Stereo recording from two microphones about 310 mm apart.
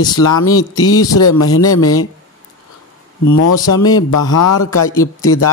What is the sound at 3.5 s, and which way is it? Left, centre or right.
Speech, centre.